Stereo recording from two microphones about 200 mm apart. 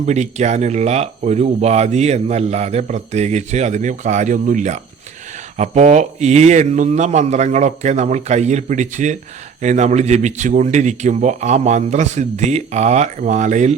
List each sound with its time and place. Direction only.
0.0 s speech: 35° right (ahead or behind)